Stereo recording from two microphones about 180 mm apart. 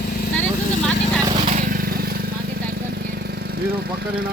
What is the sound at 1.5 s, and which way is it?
Vehicle, 45° right (ahead or behind).